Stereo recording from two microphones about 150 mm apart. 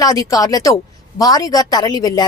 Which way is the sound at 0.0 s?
25° left (ahead or behind).